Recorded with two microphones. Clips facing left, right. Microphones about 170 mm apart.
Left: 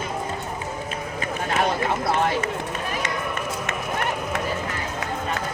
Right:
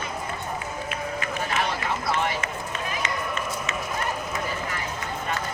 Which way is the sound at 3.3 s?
60° left (ahead or behind).